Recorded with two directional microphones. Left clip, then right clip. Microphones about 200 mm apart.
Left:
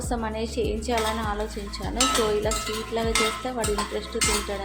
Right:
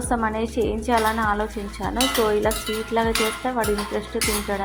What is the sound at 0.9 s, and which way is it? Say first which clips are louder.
A woman's voice: right 8 dB; 5° right (ahead or behind).